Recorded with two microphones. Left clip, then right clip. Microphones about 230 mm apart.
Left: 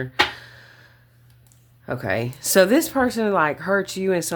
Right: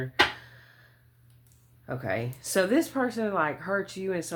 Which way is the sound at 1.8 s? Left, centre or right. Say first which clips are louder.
Left 7 dB; left.